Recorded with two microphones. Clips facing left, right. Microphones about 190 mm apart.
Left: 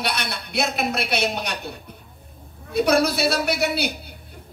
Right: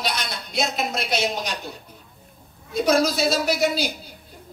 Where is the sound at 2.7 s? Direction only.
60° left (ahead or behind).